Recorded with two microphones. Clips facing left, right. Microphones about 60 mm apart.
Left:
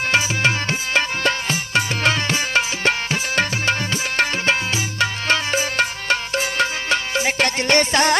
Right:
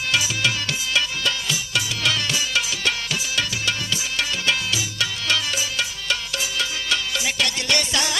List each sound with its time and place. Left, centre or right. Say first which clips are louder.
0.1 s music: left 3 dB; left